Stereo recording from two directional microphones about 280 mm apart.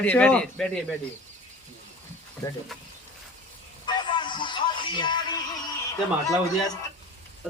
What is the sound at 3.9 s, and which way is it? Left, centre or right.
Music, centre.